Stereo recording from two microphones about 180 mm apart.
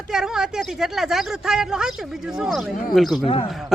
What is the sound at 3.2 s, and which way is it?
Speech, 30° left (ahead or behind).